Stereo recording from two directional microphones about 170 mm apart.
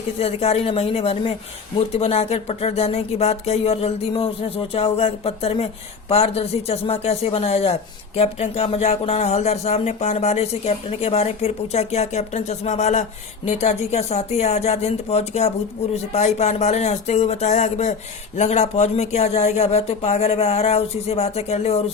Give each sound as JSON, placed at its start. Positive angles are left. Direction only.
{"t": 0.2, "sound": "speech", "side_deg": 35}